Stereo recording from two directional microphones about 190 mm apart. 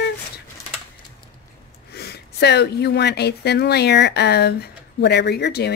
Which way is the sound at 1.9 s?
55° left (ahead or behind).